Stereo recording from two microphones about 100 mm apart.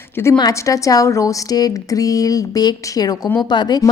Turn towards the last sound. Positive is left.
turn(degrees=45)  # may be behind; listen again after turning